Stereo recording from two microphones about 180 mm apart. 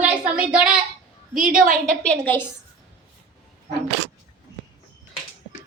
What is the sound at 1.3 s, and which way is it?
Speech, 50° right (ahead or behind).